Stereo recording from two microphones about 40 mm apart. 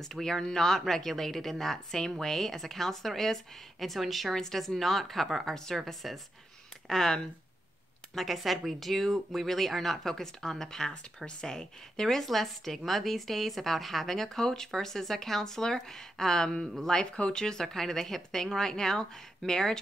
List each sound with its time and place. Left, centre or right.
0.0 s speech: centre
5.8 s speech: centre
16.6 s speech: centre
16.9 s speech: left